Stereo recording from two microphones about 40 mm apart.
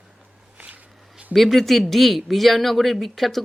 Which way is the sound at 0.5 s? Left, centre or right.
Right.